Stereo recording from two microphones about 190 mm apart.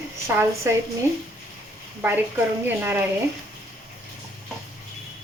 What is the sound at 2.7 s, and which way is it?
Speech, 10° right (ahead or behind).